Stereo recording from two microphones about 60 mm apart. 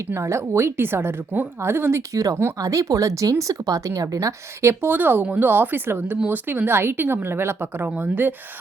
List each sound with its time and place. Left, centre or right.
0.1 s a woman's voice: right
2.1 s speech: right
4.9 s speech: right
5.2 s speech: right
5.5 s speech: right